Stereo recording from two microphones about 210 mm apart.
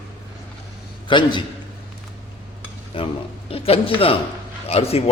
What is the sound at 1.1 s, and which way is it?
Speech, 20° left (ahead or behind).